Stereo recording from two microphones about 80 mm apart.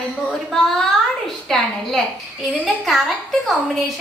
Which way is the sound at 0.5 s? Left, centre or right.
Centre.